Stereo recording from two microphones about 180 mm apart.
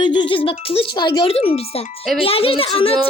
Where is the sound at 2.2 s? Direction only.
30° left (ahead or behind).